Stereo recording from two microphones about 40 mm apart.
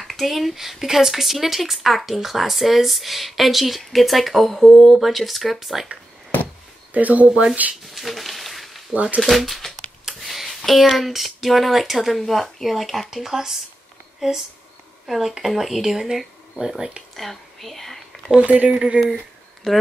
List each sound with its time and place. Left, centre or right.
0.0 s speech: centre
6.9 s speech: right
7.9 s a sound: centre
8.9 s speech: right
9.2 s speech: centre
15.0 s speech: centre
17.1 s a woman's voice: centre
18.4 s speech: right
19.7 s speech: centre